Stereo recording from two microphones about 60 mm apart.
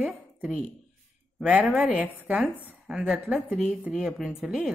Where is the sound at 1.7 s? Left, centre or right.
Right.